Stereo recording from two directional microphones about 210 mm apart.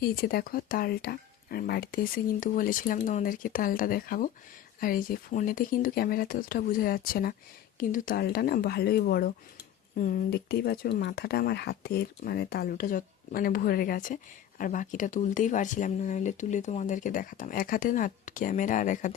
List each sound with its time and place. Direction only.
0.0 s speech: 45° left (ahead or behind)